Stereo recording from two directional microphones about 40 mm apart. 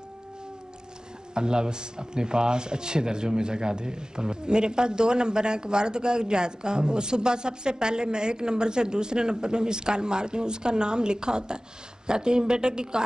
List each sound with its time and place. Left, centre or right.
1.3 s speech: right